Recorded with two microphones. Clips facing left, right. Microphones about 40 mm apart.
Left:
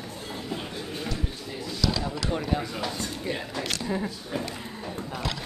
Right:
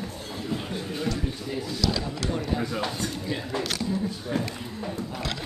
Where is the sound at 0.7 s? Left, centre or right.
Centre.